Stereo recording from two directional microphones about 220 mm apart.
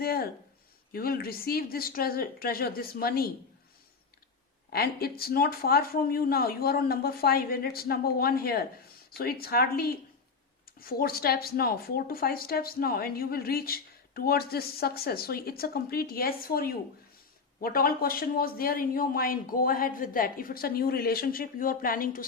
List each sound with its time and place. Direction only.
0.0 s a sound: 45° left (ahead or behind)
0.9 s speech: 45° left (ahead or behind)
4.7 s speech: 45° left (ahead or behind)